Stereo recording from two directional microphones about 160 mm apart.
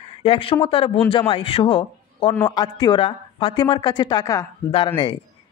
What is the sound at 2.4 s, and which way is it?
Speech, 25° left (ahead or behind).